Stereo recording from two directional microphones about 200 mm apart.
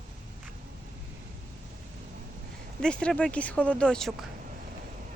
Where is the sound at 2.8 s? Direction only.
5° left (ahead or behind).